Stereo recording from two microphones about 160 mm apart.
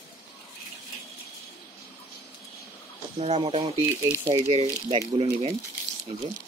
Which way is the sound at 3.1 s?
35° right (ahead or behind).